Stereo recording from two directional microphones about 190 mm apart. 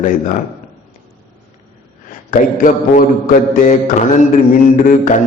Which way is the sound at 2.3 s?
45° left (ahead or behind).